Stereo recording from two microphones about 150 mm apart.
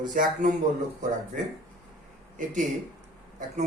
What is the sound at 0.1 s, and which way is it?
Speech, 65° right (ahead or behind).